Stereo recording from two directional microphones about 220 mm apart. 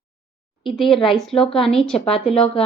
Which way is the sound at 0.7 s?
Centre (ahead or behind).